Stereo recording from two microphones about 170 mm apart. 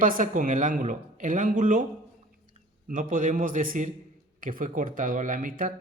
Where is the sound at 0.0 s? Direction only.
50° right (ahead or behind).